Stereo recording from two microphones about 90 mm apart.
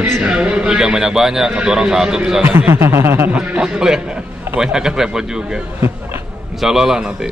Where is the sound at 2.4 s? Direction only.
25° right (ahead or behind).